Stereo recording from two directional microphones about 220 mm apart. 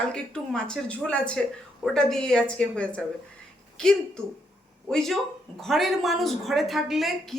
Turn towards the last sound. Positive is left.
turn(degrees=0)  # may be behind; listen again after turning